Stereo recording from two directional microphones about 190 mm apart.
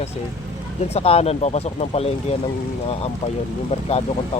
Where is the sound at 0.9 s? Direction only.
30° left (ahead or behind).